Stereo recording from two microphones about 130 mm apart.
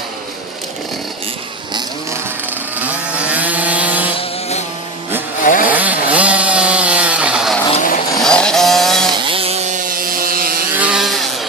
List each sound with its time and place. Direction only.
2.5 s vehicle: 10° right (ahead or behind)
4.2 s chainsaw: 55° left (ahead or behind)
5.4 s chainsaw: 90° left
5.6 s chainsaw: 10° right (ahead or behind)
7.8 s vehicle: 70° left (ahead or behind)
8.2 s vehicle: 5° left (ahead or behind)
9.2 s chainsaw: 45° right (ahead or behind); by 10.5 s 90° right
10.8 s vehicle: 5° right (ahead or behind)